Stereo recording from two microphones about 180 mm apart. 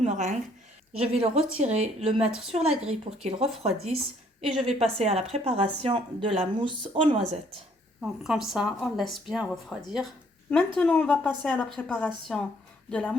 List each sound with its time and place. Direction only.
0.0 s a woman's voice: 40° right (ahead or behind)
8.2 s a woman's voice: centre (ahead or behind)
10.8 s a woman's voice: 5° left (ahead or behind)